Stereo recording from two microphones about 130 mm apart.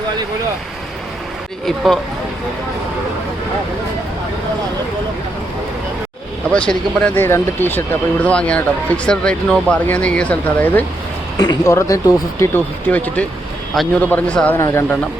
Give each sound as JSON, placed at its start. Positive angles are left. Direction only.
{"t": 1.6, "sound": "speech", "side_deg": 0}
{"t": 6.5, "sound": "speech", "side_deg": 10}
{"t": 11.3, "sound": "speech", "side_deg": 25}
{"t": 12.5, "sound": "speech", "side_deg": 10}